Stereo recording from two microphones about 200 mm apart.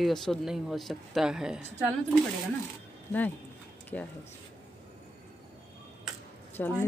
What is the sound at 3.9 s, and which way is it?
Speech, 5° left (ahead or behind).